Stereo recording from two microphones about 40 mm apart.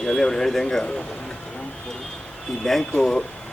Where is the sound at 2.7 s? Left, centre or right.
Centre.